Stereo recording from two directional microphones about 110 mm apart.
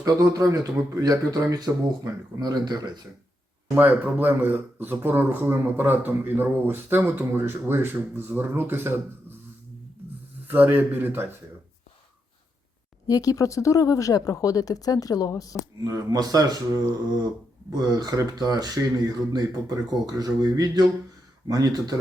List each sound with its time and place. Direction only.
0.0 s speech: 30° right (ahead or behind)
3.8 s a man's voice: 15° right (ahead or behind)
10.4 s speech: 15° right (ahead or behind)
13.1 s speech: 30° left (ahead or behind)
15.8 s speech: 30° right (ahead or behind)